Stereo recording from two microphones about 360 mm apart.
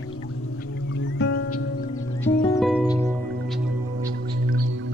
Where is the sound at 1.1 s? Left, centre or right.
Left.